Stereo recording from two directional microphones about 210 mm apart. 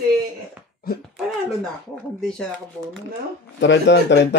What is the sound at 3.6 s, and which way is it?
Speech, 60° left (ahead or behind).